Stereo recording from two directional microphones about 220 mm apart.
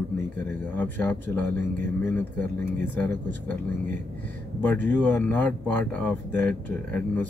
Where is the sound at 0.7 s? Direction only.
10° left (ahead or behind).